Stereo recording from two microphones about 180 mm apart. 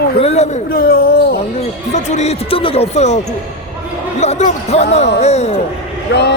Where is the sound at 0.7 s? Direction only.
55° left (ahead or behind).